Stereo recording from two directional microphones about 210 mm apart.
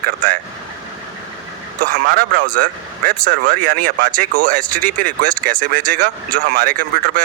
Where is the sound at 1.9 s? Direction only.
40° right (ahead or behind).